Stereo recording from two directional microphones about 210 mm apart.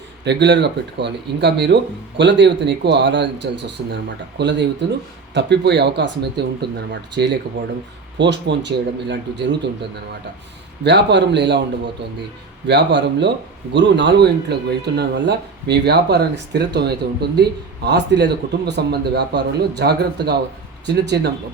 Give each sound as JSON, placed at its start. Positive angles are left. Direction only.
{"t": 0.3, "sound": "speech", "side_deg": -55}
{"t": 10.8, "sound": "speech", "side_deg": -55}
{"t": 12.6, "sound": "speech", "side_deg": -55}